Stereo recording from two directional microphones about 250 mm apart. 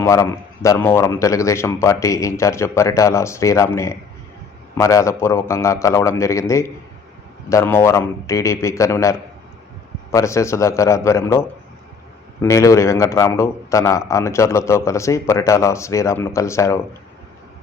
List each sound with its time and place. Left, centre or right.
0.0 s a man's voice: centre